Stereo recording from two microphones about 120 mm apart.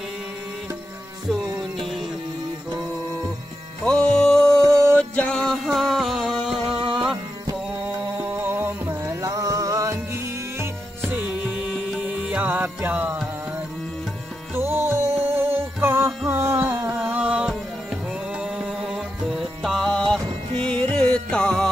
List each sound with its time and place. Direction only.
1.8 s music: centre (ahead or behind)
3.8 s music: 10° left (ahead or behind)
6.7 s music: 45° right (ahead or behind)
7.8 s music: 15° right (ahead or behind)
14.5 s music: 20° right (ahead or behind)
16.8 s a sound: 15° right (ahead or behind)
18.4 s music: 5° right (ahead or behind)